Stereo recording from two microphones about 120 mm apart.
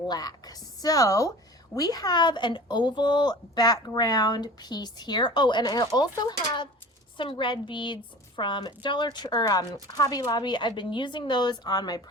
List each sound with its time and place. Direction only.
0.1 s a woman's voice: 35° left (ahead or behind)